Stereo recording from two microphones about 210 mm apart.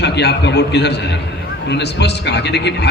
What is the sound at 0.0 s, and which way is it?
A man's voice, 55° left (ahead or behind).